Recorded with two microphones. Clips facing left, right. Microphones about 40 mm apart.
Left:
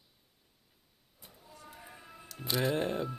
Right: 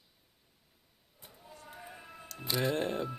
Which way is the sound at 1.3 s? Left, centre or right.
Centre.